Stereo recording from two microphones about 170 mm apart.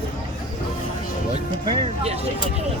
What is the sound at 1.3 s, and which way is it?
Speech, 35° right (ahead or behind).